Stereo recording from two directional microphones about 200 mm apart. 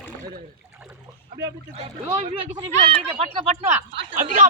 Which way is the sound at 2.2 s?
30° right (ahead or behind).